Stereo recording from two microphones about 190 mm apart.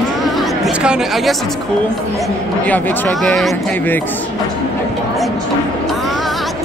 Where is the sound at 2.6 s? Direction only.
10° left (ahead or behind).